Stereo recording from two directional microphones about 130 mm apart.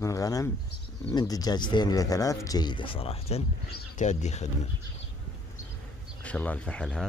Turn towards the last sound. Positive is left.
turn(degrees=5)  # may be behind; listen again after turning